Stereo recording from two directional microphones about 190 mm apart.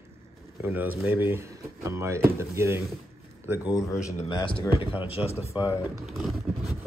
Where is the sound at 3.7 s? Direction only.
15° left (ahead or behind).